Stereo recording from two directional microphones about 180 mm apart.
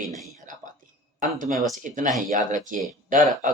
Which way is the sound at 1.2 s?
45° right (ahead or behind).